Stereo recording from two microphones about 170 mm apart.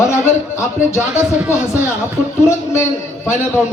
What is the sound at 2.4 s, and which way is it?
Speech, 15° left (ahead or behind).